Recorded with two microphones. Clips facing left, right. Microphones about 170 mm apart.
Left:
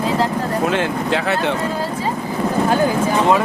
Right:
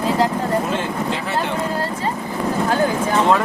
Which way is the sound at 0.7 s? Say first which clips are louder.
Left 3 dB; 80° left.